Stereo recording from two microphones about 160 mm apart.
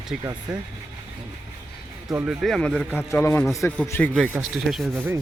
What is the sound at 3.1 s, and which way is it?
A man's voice, 15° left (ahead or behind).